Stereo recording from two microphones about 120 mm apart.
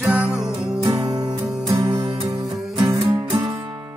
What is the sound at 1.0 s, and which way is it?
Music, 30° right (ahead or behind).